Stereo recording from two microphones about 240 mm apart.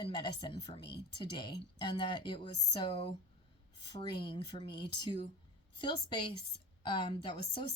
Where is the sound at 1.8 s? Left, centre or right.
Centre.